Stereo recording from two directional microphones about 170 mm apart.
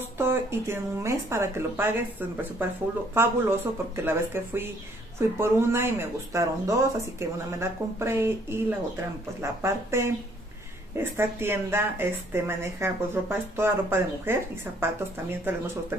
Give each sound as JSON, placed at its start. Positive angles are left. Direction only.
{"t": 0.2, "sound": "speech", "side_deg": -15}